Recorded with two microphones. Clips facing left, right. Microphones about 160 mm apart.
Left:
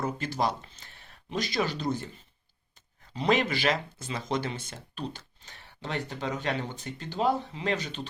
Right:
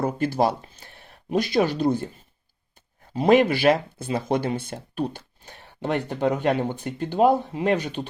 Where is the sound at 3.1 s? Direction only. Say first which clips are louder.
Right 9 dB; 50° right (ahead or behind).